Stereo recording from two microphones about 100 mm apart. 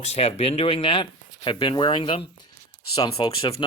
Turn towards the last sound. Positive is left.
turn(degrees=50)  # may be behind; listen again after turning